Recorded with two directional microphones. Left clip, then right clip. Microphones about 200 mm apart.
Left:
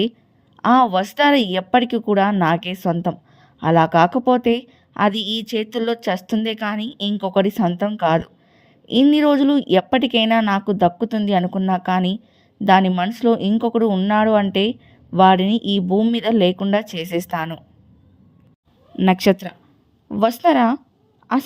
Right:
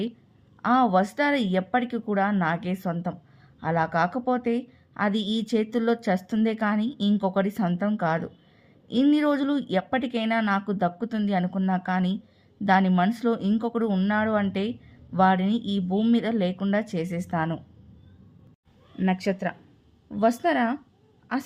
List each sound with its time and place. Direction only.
0.6 s speech: 35° left (ahead or behind)
18.9 s a woman's voice: 40° left (ahead or behind)